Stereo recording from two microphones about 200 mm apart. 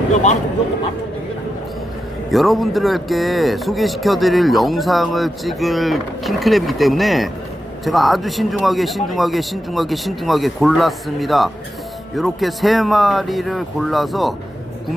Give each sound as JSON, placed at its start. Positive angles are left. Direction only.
{"t": 0.1, "sound": "speech", "side_deg": 35}
{"t": 2.3, "sound": "speech", "side_deg": 0}